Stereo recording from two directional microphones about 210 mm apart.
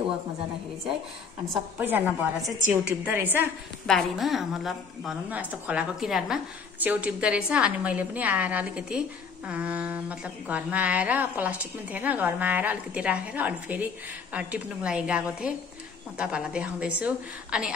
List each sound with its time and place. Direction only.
1.8 s speech: 10° right (ahead or behind)
3.8 s a woman's voice: centre (ahead or behind)